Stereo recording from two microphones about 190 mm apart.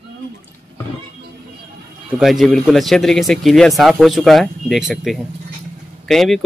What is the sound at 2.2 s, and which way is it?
A man's voice, centre (ahead or behind).